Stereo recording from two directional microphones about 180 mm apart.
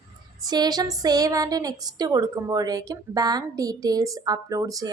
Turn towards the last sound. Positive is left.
turn(degrees=-20)  # may be behind; listen again after turning